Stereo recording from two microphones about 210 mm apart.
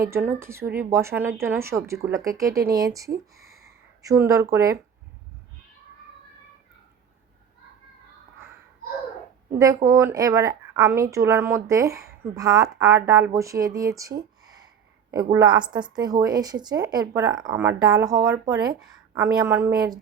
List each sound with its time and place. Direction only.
0.0 s a woman's voice: 10° right (ahead or behind)
9.5 s a woman's voice: 15° right (ahead or behind)